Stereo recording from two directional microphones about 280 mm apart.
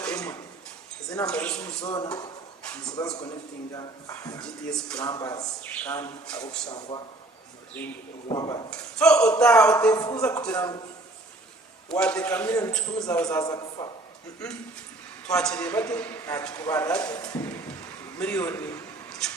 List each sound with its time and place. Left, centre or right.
0.0 s a sound: centre
1.1 s speech: centre
1.8 s a man's voice: centre
5.0 s speech: centre
6.7 s a man's voice: centre
7.8 s speech: centre
11.9 s a man's voice: centre
15.3 s a man's voice: centre